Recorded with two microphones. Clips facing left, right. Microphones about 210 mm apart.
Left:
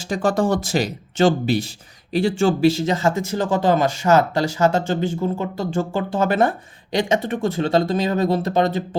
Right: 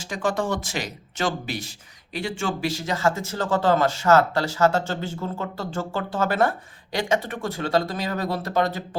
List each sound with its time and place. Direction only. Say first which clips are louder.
0.0 s speech: left 6 dB; 35° left (ahead or behind)